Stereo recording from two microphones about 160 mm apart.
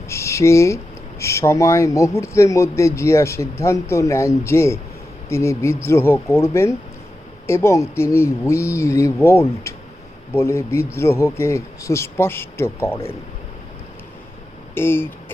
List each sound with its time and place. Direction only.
0.1 s a sound: 15° left (ahead or behind)
1.2 s speech: 15° left (ahead or behind)
14.8 s speech: 15° left (ahead or behind)